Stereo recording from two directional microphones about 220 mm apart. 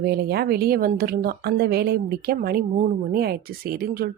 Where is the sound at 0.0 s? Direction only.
45° right (ahead or behind).